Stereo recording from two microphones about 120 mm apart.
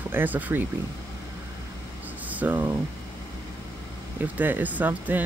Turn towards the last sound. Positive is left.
turn(degrees=-15)  # may be behind; listen again after turning